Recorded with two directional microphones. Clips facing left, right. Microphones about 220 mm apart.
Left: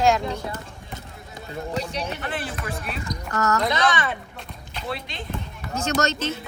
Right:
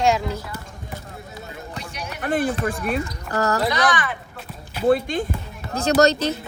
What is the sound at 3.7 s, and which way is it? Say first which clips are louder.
Speech: right 1 dB; 25° left (ahead or behind).